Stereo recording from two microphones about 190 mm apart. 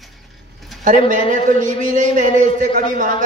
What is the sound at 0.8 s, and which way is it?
A man's voice, 40° right (ahead or behind).